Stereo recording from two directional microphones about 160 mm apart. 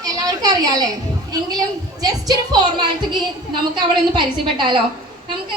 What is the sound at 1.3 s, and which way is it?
A woman's voice, 25° right (ahead or behind).